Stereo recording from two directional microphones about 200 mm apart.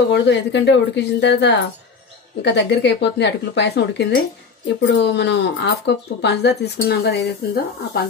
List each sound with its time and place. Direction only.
0.1 s speech: 60° left (ahead or behind)